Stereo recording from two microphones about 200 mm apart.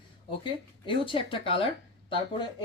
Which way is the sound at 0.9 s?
25° left (ahead or behind).